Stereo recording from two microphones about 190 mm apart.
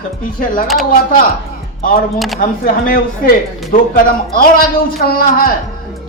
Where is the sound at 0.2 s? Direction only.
45° left (ahead or behind).